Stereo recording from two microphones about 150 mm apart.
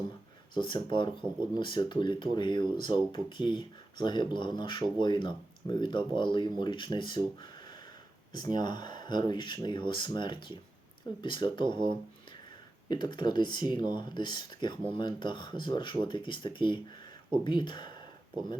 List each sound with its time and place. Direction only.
0.5 s speech: 30° left (ahead or behind)
8.5 s speech: 30° left (ahead or behind)